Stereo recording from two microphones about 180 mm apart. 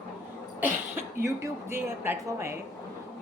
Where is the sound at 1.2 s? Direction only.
15° right (ahead or behind).